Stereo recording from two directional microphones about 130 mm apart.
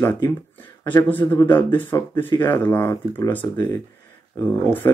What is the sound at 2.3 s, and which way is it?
Speech, 40° left (ahead or behind).